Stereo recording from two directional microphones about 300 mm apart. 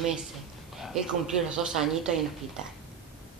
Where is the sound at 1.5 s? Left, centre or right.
Centre.